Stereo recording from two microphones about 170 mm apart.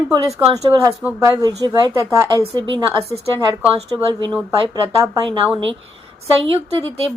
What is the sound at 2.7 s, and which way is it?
A woman's voice, 30° right (ahead or behind).